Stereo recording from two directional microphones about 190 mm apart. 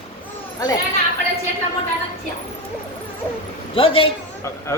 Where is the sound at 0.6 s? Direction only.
20° left (ahead or behind).